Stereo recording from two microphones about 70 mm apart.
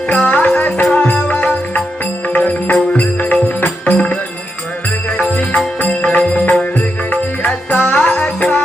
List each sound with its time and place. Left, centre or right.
0.1 s music: centre